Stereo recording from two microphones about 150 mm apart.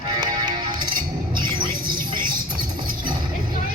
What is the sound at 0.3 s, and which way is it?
Music, 30° right (ahead or behind).